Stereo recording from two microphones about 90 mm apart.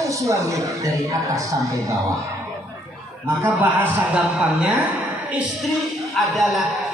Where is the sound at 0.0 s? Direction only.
35° right (ahead or behind).